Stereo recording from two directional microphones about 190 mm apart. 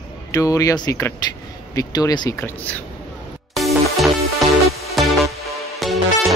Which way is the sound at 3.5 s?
Centre (ahead or behind).